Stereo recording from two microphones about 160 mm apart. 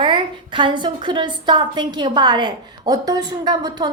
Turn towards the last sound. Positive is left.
turn(degrees=-25)  # may be behind; listen again after turning